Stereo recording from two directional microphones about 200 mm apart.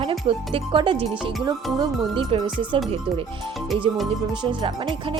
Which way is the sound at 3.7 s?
Centre (ahead or behind).